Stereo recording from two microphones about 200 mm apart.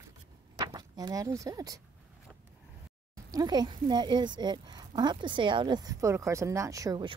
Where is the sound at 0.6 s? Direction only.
20° right (ahead or behind).